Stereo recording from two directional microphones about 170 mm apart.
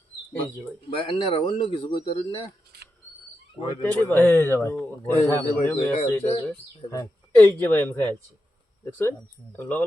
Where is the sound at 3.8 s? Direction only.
10° left (ahead or behind).